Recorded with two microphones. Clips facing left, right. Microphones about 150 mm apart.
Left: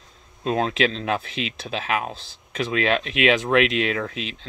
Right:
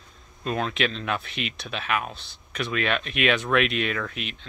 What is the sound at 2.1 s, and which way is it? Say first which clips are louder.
Speech: left 4 dB; 90° left.